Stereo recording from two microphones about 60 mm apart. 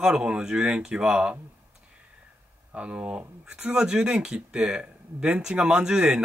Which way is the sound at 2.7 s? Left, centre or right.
Centre.